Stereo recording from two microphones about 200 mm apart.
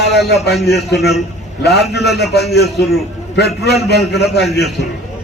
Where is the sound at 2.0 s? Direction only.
Centre (ahead or behind).